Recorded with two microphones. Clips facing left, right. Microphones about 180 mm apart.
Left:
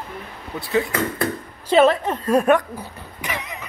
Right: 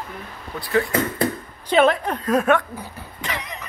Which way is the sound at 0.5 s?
20° left (ahead or behind).